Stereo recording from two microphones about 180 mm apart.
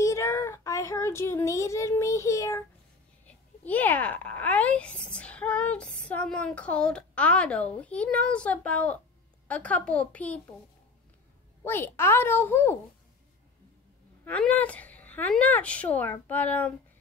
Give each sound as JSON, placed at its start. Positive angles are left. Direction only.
{"t": 0.0, "sound": "a sound", "side_deg": 15}
{"t": 3.3, "sound": "speech", "side_deg": 10}
{"t": 11.6, "sound": "speech", "side_deg": 10}
{"t": 14.2, "sound": "speech", "side_deg": 10}